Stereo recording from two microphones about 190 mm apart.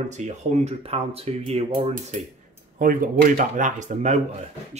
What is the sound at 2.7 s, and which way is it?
Speech, 45° right (ahead or behind).